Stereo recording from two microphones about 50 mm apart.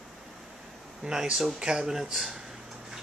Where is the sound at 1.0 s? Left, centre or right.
Centre.